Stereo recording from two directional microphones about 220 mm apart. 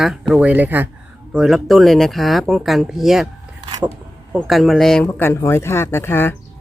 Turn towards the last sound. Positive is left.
turn(degrees=10)  # may be behind; listen again after turning